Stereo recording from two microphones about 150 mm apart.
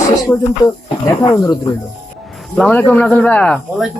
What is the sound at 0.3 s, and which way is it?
Speech, 10° left (ahead or behind).